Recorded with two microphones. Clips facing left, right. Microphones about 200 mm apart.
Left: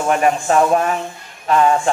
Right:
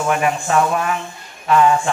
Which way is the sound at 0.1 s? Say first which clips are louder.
Left 4 dB; 40° left (ahead or behind).